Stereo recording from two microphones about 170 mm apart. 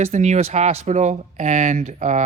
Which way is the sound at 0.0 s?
40° right (ahead or behind).